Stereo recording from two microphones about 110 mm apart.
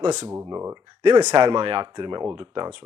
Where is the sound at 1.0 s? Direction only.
40° right (ahead or behind).